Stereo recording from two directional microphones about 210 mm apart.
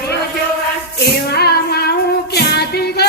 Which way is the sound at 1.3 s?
50° left (ahead or behind).